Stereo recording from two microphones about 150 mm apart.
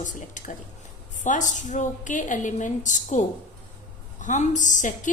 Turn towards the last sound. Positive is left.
turn(degrees=55)  # may be behind; listen again after turning